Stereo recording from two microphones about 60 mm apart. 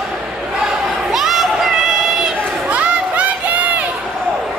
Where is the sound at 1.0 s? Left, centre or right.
Centre.